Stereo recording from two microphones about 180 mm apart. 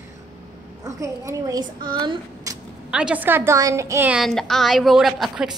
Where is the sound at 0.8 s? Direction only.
15° right (ahead or behind).